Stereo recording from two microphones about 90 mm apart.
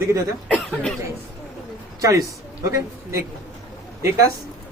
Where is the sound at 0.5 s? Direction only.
10° left (ahead or behind).